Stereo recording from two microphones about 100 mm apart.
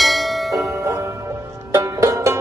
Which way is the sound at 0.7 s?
30° right (ahead or behind).